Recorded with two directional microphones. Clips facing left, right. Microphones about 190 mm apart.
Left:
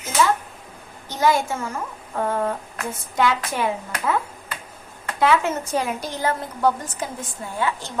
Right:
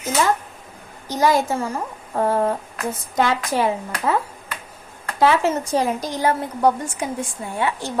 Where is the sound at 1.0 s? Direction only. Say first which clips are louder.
Right 2 dB; 40° right (ahead or behind).